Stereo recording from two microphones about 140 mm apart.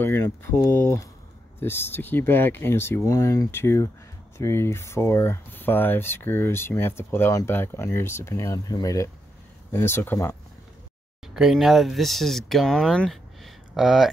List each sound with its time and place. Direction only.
0.0 s speech: 15° left (ahead or behind)
11.3 s speech: centre (ahead or behind)